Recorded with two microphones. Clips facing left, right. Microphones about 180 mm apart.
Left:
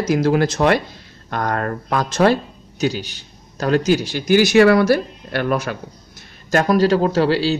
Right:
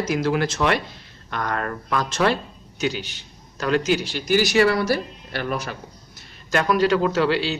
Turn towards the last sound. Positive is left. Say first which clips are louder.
# left 4 dB
turn(degrees=35)  # may be behind; listen again after turning